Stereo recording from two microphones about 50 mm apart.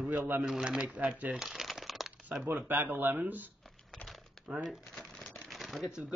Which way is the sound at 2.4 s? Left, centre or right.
Right.